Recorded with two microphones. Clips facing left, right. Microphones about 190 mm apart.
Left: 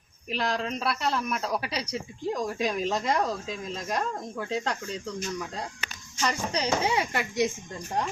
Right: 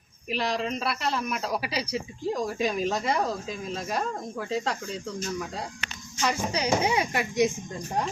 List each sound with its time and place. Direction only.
0.3 s speech: centre (ahead or behind); by 7.5 s 20° right (ahead or behind)